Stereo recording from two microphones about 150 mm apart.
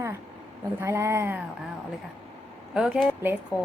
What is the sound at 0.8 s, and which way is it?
Speech, 15° right (ahead or behind).